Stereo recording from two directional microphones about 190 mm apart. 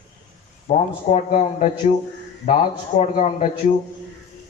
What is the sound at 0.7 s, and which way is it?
Speech, 35° left (ahead or behind).